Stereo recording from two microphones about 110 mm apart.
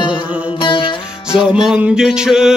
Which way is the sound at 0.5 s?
50° left (ahead or behind).